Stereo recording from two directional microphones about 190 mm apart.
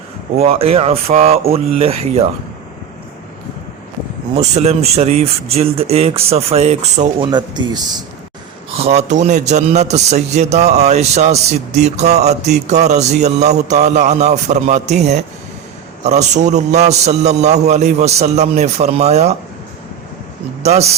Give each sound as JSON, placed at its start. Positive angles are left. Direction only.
{"t": 0.3, "sound": "a man's voice", "side_deg": -30}
{"t": 4.4, "sound": "a man's voice", "side_deg": -35}
{"t": 7.3, "sound": "speech", "side_deg": -25}
{"t": 8.7, "sound": "a man's voice", "side_deg": -35}
{"t": 20.6, "sound": "a man's voice", "side_deg": -35}